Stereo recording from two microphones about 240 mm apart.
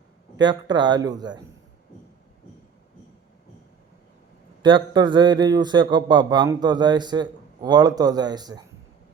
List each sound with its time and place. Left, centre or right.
0.3 s a man's voice: centre
4.6 s a man's voice: centre